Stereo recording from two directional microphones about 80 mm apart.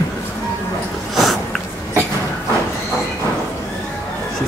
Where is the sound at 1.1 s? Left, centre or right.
Centre.